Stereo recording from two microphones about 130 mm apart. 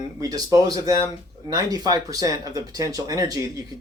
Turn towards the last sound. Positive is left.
turn(degrees=-30)  # may be behind; listen again after turning